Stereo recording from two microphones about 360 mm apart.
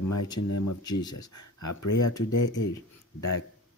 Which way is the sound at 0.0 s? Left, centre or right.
Left.